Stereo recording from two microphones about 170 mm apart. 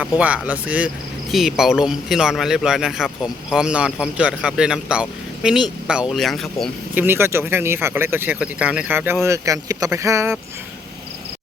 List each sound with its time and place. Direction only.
0.2 s a man's voice: 10° right (ahead or behind)
6.9 s speech: 10° right (ahead or behind)